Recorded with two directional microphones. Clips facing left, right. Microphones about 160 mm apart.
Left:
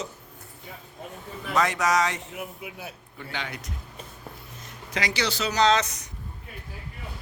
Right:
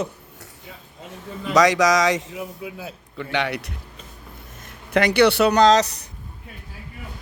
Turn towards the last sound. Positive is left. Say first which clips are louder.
# right 6 dB
turn(degrees=-35)  # may be behind; listen again after turning